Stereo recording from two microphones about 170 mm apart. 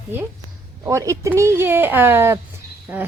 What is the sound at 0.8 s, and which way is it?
A woman's voice, 20° right (ahead or behind).